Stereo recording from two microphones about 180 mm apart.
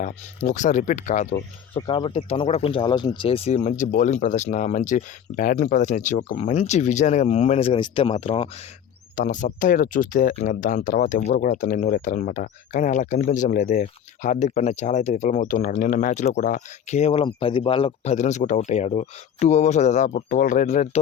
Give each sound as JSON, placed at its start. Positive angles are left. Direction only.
{"t": 0.0, "sound": "speech", "side_deg": 45}
{"t": 1.9, "sound": "speech", "side_deg": 30}
{"t": 9.1, "sound": "speech", "side_deg": 45}